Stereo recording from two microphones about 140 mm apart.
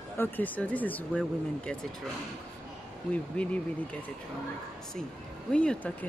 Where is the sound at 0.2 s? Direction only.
10° left (ahead or behind).